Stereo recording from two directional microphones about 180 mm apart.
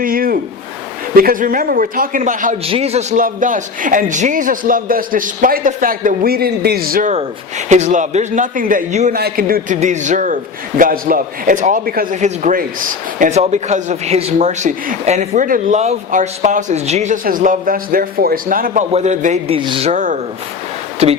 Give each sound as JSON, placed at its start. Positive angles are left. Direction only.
{"t": 0.0, "sound": "a sound", "side_deg": -55}
{"t": 1.1, "sound": "a man's voice", "side_deg": -55}
{"t": 2.6, "sound": "a man's voice", "side_deg": -35}
{"t": 3.2, "sound": "a man's voice", "side_deg": -50}
{"t": 7.7, "sound": "a man's voice", "side_deg": -40}
{"t": 9.1, "sound": "a man's voice", "side_deg": -55}
{"t": 17.2, "sound": "a man's voice", "side_deg": -50}
{"t": 19.9, "sound": "a man's voice", "side_deg": -45}